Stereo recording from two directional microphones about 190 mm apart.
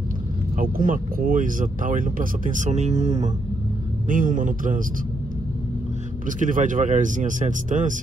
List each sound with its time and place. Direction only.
0.6 s speech: 45° right (ahead or behind)
6.2 s speech: 45° right (ahead or behind)